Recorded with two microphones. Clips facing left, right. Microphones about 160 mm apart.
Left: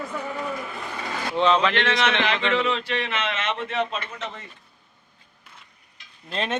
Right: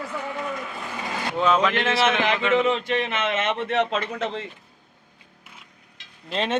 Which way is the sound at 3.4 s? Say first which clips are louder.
Right 5 dB; 60° right (ahead or behind).